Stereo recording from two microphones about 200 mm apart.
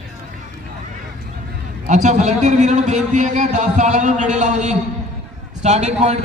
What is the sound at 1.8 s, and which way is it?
A man's voice, 35° right (ahead or behind).